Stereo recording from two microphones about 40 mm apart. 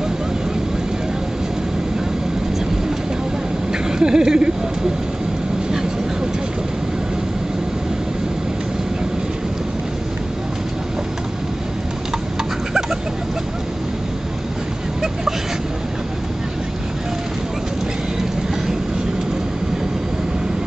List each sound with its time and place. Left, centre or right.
4.0 s speech: centre